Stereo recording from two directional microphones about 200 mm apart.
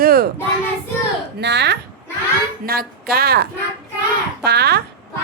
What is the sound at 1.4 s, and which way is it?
A woman's voice, 60° right (ahead or behind).